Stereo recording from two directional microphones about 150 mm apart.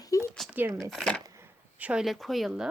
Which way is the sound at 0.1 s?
20° left (ahead or behind).